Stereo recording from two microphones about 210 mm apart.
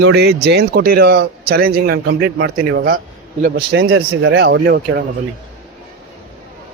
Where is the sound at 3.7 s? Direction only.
70° right (ahead or behind).